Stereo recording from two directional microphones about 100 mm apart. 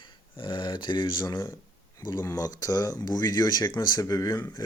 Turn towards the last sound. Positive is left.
turn(degrees=35)  # may be behind; listen again after turning